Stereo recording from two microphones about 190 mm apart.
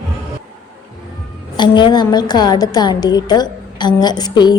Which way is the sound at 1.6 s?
25° left (ahead or behind).